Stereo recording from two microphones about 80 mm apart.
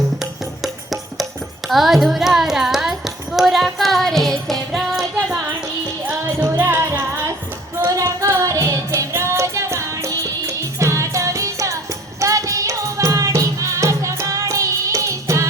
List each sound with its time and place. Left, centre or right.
0.6 s music: centre
6.6 s music: right
7.9 s music: right